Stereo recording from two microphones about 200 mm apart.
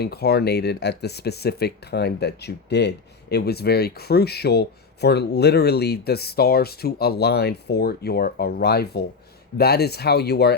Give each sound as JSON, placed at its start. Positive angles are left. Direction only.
{"t": 0.0, "sound": "speech", "side_deg": 55}